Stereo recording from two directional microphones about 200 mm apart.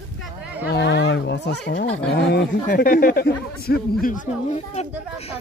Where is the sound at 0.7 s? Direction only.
60° left (ahead or behind).